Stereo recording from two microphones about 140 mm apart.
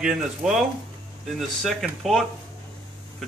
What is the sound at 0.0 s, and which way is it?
Speech, 5° right (ahead or behind).